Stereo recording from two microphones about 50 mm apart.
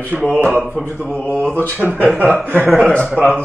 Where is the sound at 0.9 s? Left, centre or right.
Left.